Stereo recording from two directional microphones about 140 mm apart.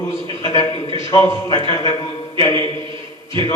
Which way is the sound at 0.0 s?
25° left (ahead or behind).